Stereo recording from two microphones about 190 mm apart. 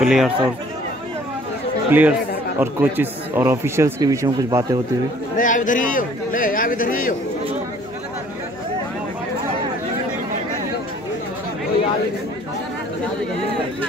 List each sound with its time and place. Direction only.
0.0 s speech: centre (ahead or behind)
1.9 s a man's voice: 10° right (ahead or behind)
5.4 s a man's voice: 45° left (ahead or behind)